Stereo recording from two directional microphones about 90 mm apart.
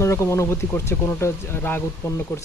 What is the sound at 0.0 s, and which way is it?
Speech, 30° left (ahead or behind).